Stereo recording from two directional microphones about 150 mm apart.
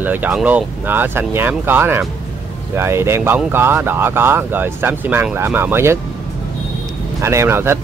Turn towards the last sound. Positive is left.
turn(degrees=-15)  # may be behind; listen again after turning